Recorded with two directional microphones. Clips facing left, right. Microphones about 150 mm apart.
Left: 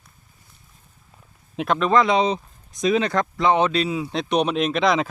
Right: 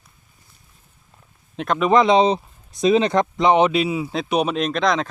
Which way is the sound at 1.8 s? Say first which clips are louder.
Right 4 dB; 15° right (ahead or behind).